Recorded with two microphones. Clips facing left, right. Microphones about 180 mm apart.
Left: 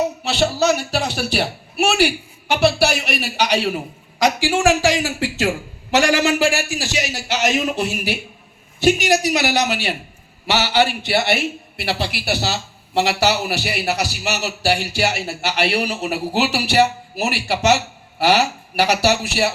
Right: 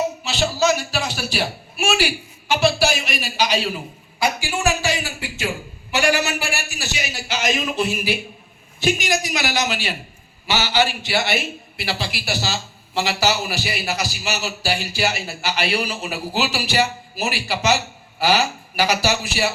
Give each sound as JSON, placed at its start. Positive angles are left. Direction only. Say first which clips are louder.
{"t": 0.3, "sound": "speech", "louder": "left 2 dB", "side_deg": 60}
{"t": 4.2, "sound": "a man's voice", "louder": "left 5 dB", "side_deg": 90}